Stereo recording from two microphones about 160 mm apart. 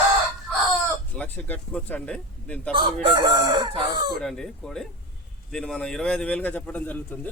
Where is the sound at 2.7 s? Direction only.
30° right (ahead or behind).